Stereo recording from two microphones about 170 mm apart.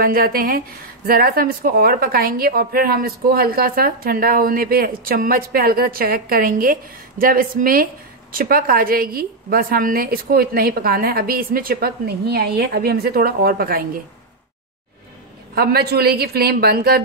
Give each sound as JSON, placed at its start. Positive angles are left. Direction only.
{"t": 0.0, "sound": "speech", "side_deg": -60}
{"t": 15.5, "sound": "speech", "side_deg": -65}